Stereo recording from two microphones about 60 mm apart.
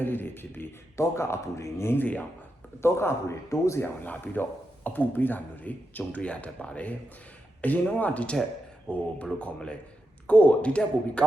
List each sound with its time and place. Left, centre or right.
0.0 s beatboxing: left
0.9 s a man's voice: left
1.9 s speech: left
2.8 s a man's voice: left
3.8 s speech: left